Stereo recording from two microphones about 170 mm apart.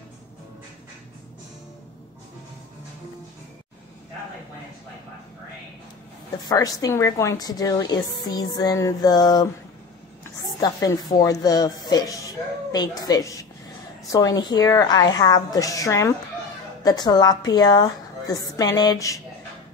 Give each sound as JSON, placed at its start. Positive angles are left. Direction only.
{"t": 6.4, "sound": "a woman's voice", "side_deg": 20}
{"t": 10.6, "sound": "a woman's voice", "side_deg": 20}